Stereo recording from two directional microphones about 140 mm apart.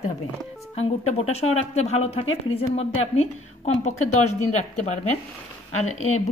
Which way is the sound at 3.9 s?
60° left (ahead or behind).